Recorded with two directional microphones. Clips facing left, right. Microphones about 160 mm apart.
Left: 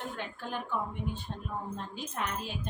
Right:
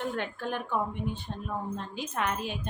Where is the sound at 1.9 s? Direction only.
75° right (ahead or behind).